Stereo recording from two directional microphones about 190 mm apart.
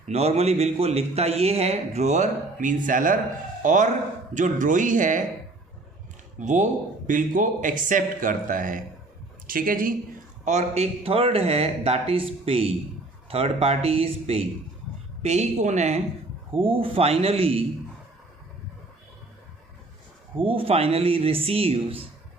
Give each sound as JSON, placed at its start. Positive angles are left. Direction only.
{"t": 0.1, "sound": "speech", "side_deg": -35}
{"t": 6.4, "sound": "speech", "side_deg": -40}
{"t": 20.3, "sound": "speech", "side_deg": -30}